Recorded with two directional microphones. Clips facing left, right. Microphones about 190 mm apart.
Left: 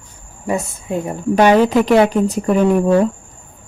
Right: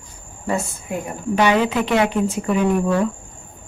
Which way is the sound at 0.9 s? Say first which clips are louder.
Left 5 dB; 25° left (ahead or behind).